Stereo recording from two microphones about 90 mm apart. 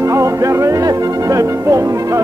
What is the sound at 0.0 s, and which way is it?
Music, 35° right (ahead or behind).